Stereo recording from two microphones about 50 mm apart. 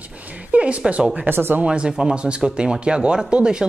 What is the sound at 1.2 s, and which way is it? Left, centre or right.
Speech, right.